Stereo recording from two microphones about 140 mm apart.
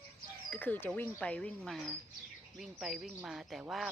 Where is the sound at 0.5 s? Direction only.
15° left (ahead or behind).